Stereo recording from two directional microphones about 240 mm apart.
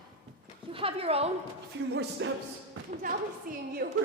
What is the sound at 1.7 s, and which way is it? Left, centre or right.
Speech, right.